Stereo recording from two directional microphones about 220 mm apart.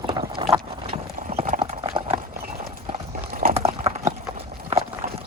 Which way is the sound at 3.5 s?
25° right (ahead or behind).